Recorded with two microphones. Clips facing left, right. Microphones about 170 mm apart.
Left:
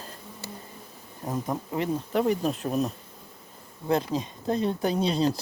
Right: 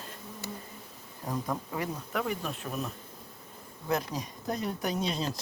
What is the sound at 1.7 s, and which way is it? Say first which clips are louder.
Speech: left 7 dB; 25° left (ahead or behind).